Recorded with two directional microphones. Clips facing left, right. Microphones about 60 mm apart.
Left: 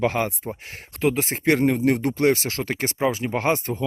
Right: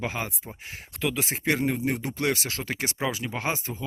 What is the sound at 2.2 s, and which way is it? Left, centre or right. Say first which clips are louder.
Speech: left 6 dB; left.